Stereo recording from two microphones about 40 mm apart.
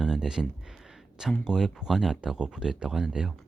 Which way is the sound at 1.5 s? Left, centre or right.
Centre.